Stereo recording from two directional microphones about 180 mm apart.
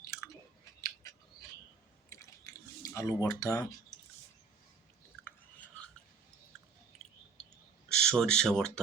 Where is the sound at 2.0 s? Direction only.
15° left (ahead or behind).